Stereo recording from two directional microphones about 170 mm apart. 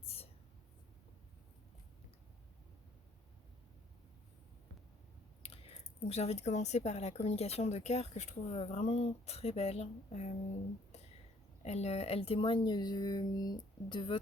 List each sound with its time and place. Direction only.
0.0 s a sound: 35° left (ahead or behind)
5.4 s speech: 35° left (ahead or behind)
11.6 s speech: 40° left (ahead or behind)